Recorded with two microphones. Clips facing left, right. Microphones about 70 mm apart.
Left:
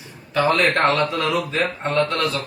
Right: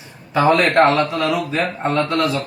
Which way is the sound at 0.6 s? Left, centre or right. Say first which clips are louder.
Right 4 dB; centre.